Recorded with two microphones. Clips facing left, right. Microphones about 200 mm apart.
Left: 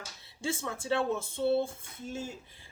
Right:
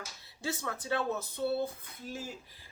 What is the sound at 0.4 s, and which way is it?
Speech, 25° left (ahead or behind).